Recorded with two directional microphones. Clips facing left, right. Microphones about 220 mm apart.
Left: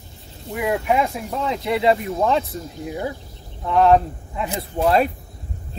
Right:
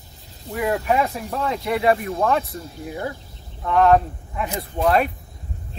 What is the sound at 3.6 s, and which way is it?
Speech, 20° left (ahead or behind).